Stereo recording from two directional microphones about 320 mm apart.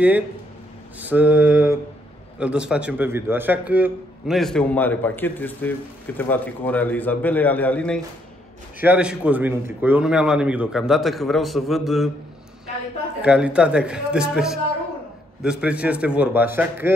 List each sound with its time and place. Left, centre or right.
0.9 s a man's voice: centre
13.2 s a man's voice: centre